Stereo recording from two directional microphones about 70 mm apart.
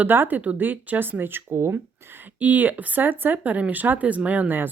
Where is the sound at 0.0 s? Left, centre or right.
Right.